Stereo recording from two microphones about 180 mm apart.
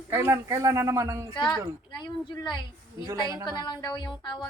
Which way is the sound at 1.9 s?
25° left (ahead or behind).